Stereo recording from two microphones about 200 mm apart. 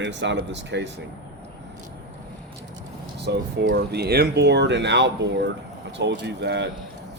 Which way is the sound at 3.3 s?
55° right (ahead or behind).